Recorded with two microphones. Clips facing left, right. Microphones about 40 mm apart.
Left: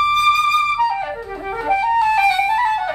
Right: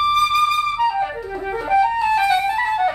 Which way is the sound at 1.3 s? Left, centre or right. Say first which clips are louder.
Right 1 dB; centre.